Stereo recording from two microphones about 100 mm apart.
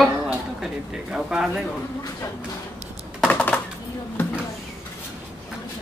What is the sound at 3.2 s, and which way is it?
Typing, 15° left (ahead or behind).